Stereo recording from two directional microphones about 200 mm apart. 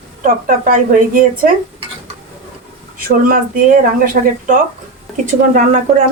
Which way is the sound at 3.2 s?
45° right (ahead or behind).